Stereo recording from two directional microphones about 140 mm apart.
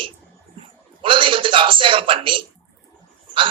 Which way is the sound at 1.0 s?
40° right (ahead or behind).